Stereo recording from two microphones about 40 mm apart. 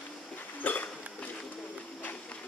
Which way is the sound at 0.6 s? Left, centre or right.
Left.